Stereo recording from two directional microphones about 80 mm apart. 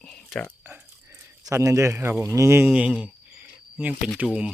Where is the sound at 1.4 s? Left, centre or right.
Right.